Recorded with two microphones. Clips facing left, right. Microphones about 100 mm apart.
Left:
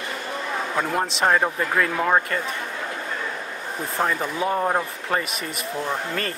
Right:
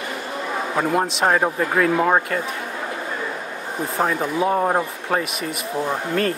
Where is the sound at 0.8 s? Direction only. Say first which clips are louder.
Right 4 dB; 5° right (ahead or behind).